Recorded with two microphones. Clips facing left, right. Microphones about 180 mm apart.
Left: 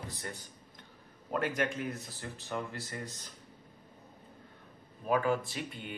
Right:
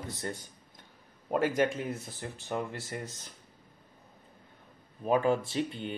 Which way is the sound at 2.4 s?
25° right (ahead or behind).